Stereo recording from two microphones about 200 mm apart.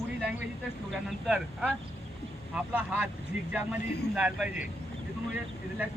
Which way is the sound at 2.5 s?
10° right (ahead or behind).